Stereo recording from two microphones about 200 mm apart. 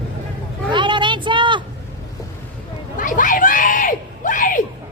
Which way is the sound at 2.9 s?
40° left (ahead or behind).